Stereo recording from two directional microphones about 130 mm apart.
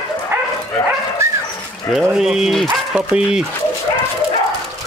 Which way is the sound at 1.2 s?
20° right (ahead or behind).